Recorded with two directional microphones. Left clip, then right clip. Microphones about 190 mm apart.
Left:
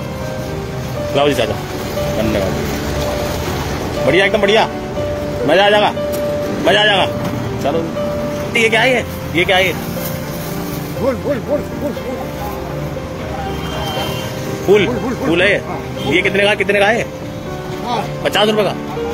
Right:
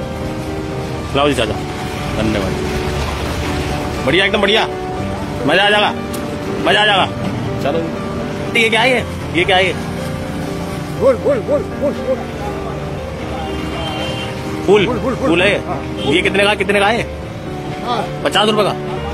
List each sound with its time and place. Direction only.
1.1 s speech: 15° right (ahead or behind)
4.1 s a man's voice: 20° right (ahead or behind)
8.5 s speech: 20° right (ahead or behind)
11.0 s a man's voice: 30° right (ahead or behind)
14.7 s speech: 15° right (ahead or behind)